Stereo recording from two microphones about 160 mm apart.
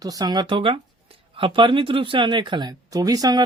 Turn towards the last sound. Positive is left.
turn(degrees=-25)  # may be behind; listen again after turning